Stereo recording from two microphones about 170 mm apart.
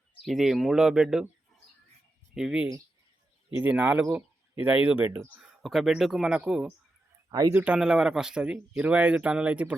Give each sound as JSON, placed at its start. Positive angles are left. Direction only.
{"t": 0.3, "sound": "speech", "side_deg": 0}
{"t": 2.3, "sound": "speech", "side_deg": -5}
{"t": 7.3, "sound": "speech", "side_deg": -20}
{"t": 7.5, "sound": "speech", "side_deg": -10}